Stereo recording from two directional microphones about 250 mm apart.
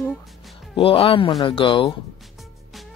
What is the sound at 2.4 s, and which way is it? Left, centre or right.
Music, centre.